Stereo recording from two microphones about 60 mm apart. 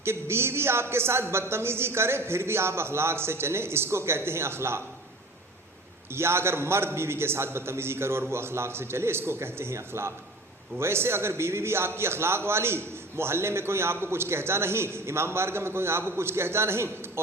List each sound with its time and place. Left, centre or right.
0.0 s a man's voice: right
6.1 s a man's voice: right